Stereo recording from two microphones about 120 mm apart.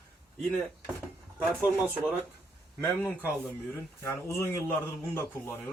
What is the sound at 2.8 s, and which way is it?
Speech, 20° left (ahead or behind).